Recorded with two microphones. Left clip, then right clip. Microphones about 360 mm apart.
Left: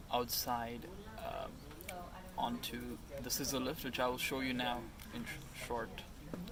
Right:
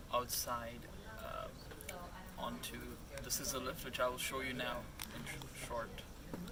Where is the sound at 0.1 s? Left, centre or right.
Centre.